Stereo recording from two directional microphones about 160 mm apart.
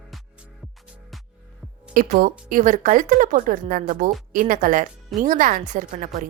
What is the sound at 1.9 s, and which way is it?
Speech, 60° right (ahead or behind).